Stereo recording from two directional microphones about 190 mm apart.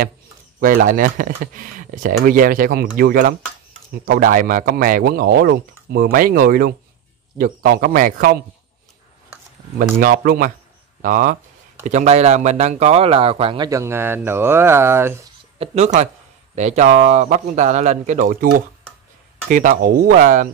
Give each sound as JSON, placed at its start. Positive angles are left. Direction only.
{"t": 0.6, "sound": "speech", "side_deg": -50}
{"t": 9.9, "sound": "a man's voice", "side_deg": -50}
{"t": 13.7, "sound": "speech", "side_deg": -15}
{"t": 15.6, "sound": "a man's voice", "side_deg": -35}
{"t": 19.5, "sound": "speech", "side_deg": -45}